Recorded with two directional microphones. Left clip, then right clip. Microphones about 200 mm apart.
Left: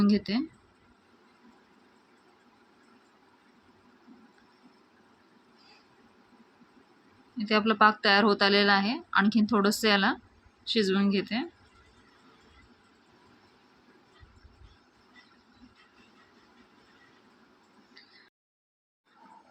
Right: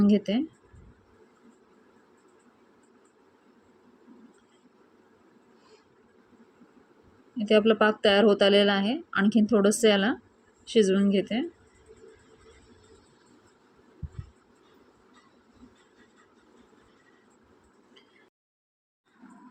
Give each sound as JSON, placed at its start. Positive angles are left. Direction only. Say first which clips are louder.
{"t": 0.0, "sound": "speech", "louder": "right 3 dB", "side_deg": -10}
{"t": 7.3, "sound": "speech", "louder": "right 3 dB", "side_deg": -10}